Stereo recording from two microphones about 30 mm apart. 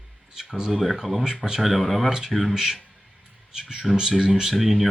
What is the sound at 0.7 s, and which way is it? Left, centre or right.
Speech, centre.